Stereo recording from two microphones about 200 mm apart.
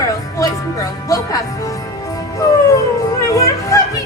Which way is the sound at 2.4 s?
15° left (ahead or behind).